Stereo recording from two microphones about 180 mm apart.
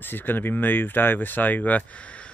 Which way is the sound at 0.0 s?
10° left (ahead or behind).